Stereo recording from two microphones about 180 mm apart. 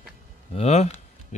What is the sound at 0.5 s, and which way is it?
Speech, 40° left (ahead or behind).